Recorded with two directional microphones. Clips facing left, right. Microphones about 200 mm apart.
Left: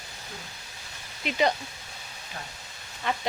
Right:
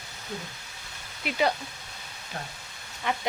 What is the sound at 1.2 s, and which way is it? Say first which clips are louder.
Speech: left 1 dB; 5° right (ahead or behind).